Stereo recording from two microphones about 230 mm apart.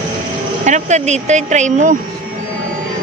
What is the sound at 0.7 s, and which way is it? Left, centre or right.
Speech, right.